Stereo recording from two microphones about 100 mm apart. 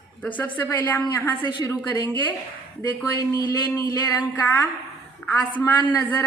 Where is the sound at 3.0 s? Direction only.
40° left (ahead or behind).